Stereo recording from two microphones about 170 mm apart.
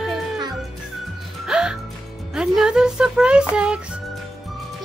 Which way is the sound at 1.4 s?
5° right (ahead or behind).